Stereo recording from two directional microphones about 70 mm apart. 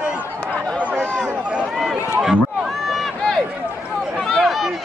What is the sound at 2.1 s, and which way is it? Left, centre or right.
Run, centre.